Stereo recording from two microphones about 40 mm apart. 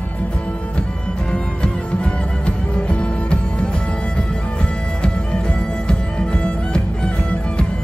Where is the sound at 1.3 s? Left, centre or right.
Left.